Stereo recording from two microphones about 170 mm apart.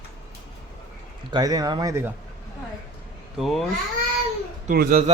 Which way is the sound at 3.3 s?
Centre (ahead or behind).